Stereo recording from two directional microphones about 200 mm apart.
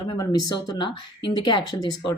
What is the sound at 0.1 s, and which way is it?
Speech, 20° left (ahead or behind).